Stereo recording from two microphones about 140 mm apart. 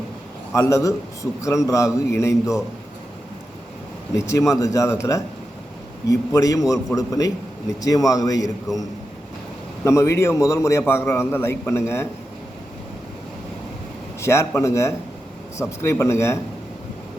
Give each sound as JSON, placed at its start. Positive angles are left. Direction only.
{"t": 0.5, "sound": "a man's voice", "side_deg": 20}
{"t": 4.1, "sound": "a man's voice", "side_deg": 20}
{"t": 9.8, "sound": "a man's voice", "side_deg": 20}
{"t": 14.2, "sound": "a man's voice", "side_deg": 20}